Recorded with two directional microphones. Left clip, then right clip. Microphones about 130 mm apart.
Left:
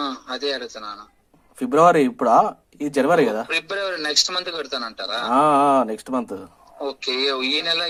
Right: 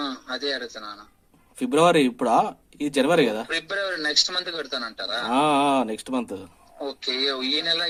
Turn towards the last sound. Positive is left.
turn(degrees=25)  # may be behind; listen again after turning